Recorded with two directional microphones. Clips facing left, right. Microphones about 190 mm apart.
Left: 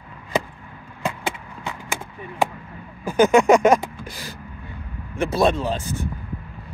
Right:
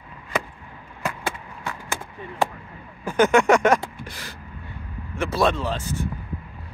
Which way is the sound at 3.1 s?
15° left (ahead or behind).